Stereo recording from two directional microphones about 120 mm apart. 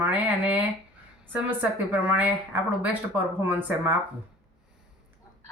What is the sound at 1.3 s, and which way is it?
Speech, 10° right (ahead or behind).